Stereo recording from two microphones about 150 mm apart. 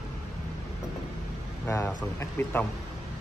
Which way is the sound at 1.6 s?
15° left (ahead or behind).